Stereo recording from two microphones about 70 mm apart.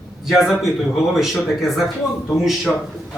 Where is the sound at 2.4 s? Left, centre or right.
Centre.